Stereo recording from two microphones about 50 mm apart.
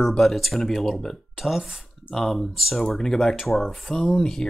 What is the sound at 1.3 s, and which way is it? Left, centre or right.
Speech, centre.